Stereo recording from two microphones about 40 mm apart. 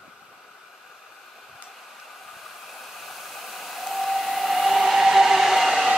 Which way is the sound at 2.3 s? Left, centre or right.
Centre.